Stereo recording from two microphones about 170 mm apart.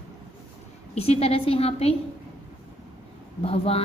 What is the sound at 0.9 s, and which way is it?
A woman's voice, 35° left (ahead or behind).